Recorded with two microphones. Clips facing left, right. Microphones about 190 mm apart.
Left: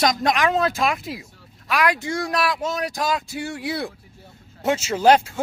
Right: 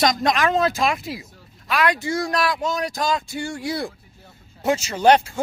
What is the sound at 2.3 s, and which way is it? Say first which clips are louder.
Speech: right 1 dB; 5° left (ahead or behind).